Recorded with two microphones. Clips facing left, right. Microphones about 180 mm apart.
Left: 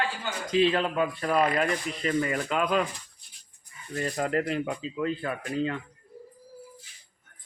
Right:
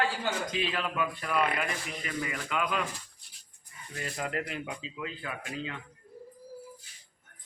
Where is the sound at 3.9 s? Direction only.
40° left (ahead or behind).